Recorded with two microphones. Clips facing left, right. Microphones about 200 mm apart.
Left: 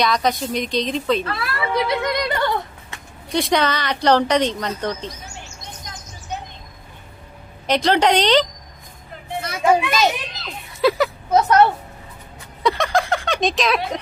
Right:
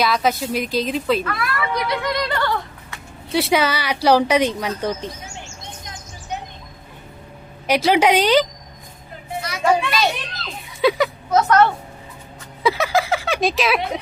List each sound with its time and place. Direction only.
0.0 s a woman's voice: 5° right (ahead or behind)
1.2 s speech: 30° left (ahead or behind)
3.3 s speech: 5° right (ahead or behind)
7.7 s speech: 10° right (ahead or behind)
9.4 s a sound: 50° left (ahead or behind)
10.7 s a sound: centre (ahead or behind)
11.3 s a woman's voice: 20° left (ahead or behind)
12.6 s a woman's voice: 5° right (ahead or behind)